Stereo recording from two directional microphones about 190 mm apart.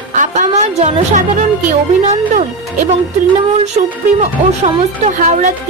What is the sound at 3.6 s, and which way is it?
A woman's voice, 35° right (ahead or behind).